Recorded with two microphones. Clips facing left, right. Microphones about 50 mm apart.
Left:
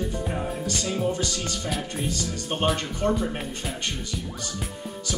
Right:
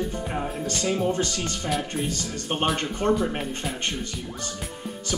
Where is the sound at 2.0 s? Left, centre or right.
Right.